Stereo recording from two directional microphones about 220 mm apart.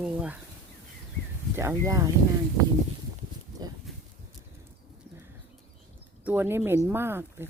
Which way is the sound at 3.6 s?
20° right (ahead or behind).